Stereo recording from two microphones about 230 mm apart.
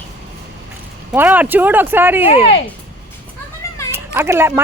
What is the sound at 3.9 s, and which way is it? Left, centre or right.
Speech, centre.